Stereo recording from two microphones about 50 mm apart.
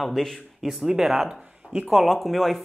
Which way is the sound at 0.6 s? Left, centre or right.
Centre.